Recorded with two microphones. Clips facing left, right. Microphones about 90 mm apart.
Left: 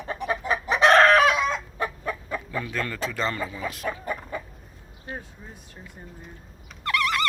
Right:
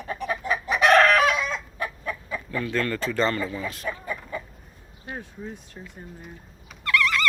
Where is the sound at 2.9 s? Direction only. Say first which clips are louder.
Right 3 dB; centre (ahead or behind).